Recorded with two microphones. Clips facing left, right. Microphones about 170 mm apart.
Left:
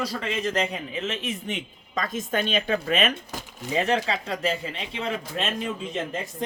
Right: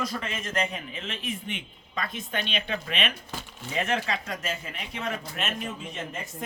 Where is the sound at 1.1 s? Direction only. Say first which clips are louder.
Left 3 dB; 40° right (ahead or behind).